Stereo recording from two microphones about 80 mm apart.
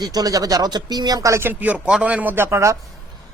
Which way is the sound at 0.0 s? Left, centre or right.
Right.